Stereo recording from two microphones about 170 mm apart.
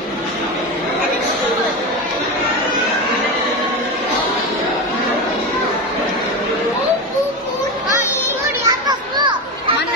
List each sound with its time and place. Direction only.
8.6 s children playing: 25° right (ahead or behind)